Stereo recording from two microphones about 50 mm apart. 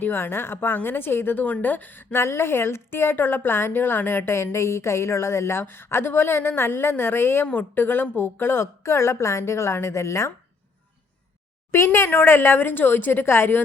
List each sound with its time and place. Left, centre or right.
0.0 s a woman's voice: left
1.5 s a woman's voice: left
8.6 s a woman's voice: left
11.7 s a woman's voice: left